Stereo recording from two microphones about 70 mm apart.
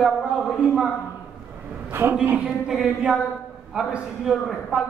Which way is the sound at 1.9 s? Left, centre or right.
Right.